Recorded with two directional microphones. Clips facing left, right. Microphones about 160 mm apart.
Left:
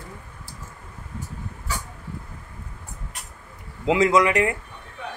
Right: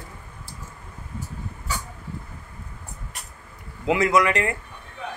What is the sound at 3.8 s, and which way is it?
Speech, 20° left (ahead or behind).